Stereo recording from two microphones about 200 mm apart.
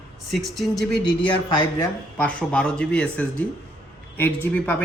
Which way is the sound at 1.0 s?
25° left (ahead or behind).